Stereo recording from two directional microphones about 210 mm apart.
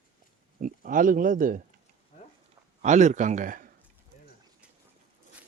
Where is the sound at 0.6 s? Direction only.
40° right (ahead or behind).